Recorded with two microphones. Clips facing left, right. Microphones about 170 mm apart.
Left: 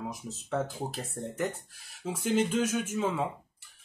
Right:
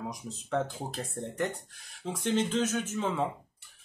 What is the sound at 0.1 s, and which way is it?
Speech, 5° left (ahead or behind).